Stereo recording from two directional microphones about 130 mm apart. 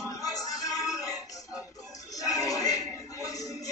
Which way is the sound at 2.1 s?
25° left (ahead or behind).